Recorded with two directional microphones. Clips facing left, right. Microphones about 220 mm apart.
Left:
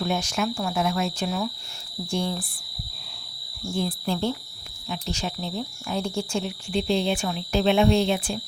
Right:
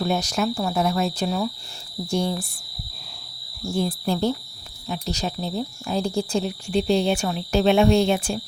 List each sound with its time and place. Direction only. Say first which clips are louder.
0.0 s speech: right 3 dB; 40° right (ahead or behind)
3.8 s speech: right 3 dB; 40° right (ahead or behind)